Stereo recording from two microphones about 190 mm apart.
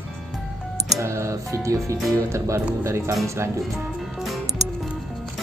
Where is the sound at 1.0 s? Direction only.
15° right (ahead or behind).